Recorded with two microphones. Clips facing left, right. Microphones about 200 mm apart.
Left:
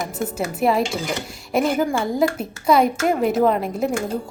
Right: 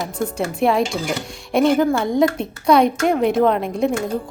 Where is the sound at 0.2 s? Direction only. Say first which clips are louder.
Right 3 dB; 5° left (ahead or behind).